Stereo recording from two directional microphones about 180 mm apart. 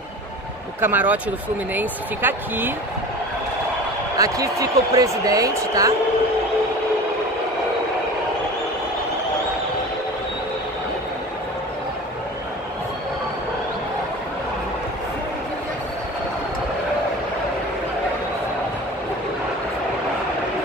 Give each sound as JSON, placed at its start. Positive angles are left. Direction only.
{"t": 0.7, "sound": "speech", "side_deg": -10}
{"t": 4.2, "sound": "speech", "side_deg": -20}